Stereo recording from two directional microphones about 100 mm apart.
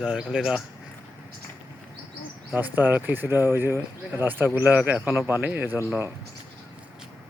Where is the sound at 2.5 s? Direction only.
20° right (ahead or behind).